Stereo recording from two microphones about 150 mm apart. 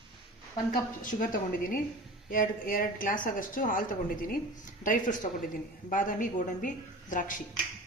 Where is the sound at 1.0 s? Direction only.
65° left (ahead or behind).